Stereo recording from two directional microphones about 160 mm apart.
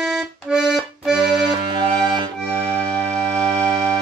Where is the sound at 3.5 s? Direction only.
25° right (ahead or behind).